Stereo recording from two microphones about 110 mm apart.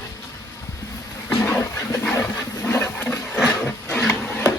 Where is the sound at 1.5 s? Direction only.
20° left (ahead or behind).